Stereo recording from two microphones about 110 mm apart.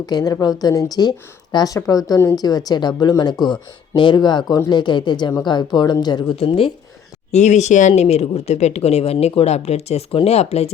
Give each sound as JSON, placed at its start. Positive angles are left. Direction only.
{"t": 0.0, "sound": "speech", "side_deg": 35}
{"t": 6.3, "sound": "speech", "side_deg": 60}
{"t": 7.3, "sound": "speech", "side_deg": 90}
{"t": 9.1, "sound": "speech", "side_deg": 60}